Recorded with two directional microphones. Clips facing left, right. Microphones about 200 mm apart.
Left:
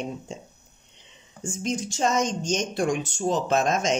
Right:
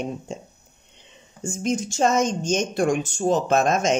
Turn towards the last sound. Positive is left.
turn(degrees=-50)  # may be behind; listen again after turning